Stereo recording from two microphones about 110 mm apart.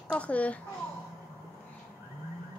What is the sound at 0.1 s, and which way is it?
Speech, 10° left (ahead or behind).